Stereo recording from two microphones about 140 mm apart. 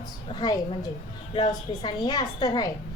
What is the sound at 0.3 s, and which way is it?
A woman's voice, 30° left (ahead or behind).